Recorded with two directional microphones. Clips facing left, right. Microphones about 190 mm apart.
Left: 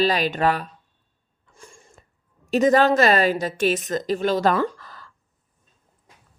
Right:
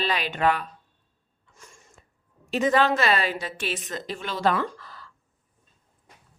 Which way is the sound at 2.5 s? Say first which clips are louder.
Left 5 dB; 40° left (ahead or behind).